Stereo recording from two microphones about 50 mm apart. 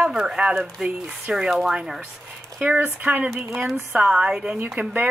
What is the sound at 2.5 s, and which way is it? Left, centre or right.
Speech, right.